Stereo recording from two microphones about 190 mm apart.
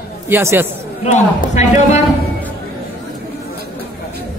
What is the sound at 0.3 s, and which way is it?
Speech, 10° right (ahead or behind).